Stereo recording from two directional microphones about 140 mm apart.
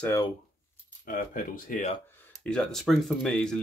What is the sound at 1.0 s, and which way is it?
Speech, 75° left (ahead or behind).